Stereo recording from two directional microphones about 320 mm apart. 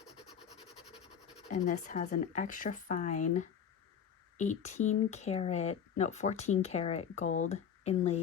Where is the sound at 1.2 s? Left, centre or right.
Left.